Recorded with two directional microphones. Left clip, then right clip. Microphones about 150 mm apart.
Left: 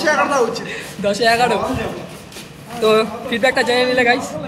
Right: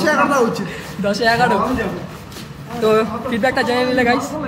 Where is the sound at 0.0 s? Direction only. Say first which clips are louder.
Even; 30° left (ahead or behind).